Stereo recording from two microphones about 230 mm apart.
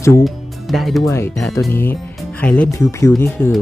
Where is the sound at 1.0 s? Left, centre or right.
Centre.